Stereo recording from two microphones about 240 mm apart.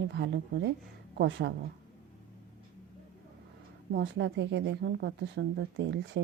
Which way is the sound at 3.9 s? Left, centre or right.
Right.